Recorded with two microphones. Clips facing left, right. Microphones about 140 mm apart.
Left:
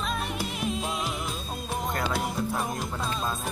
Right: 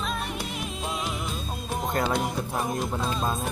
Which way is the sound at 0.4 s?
Centre (ahead or behind).